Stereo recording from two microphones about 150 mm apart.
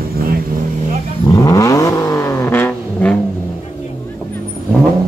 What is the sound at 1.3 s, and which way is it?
Vehicle, 20° left (ahead or behind).